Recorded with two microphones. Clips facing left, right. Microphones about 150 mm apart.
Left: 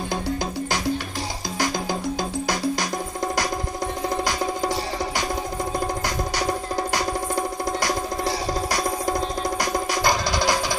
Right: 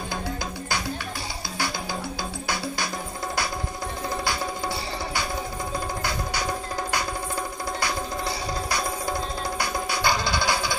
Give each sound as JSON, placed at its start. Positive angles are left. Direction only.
{"t": 2.4, "sound": "music", "side_deg": 40}
{"t": 6.0, "sound": "music", "side_deg": 35}